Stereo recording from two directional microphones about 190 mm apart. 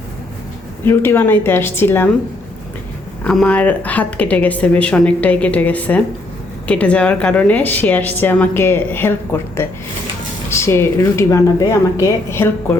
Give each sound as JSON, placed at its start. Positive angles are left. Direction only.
{"t": 0.9, "sound": "a woman's voice", "side_deg": 10}
{"t": 3.2, "sound": "a woman's voice", "side_deg": 5}